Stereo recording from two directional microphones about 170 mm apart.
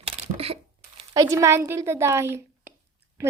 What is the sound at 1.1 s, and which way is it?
A woman's voice, 15° right (ahead or behind).